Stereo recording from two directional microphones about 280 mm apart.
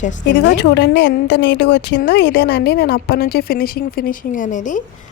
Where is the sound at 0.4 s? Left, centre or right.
Left.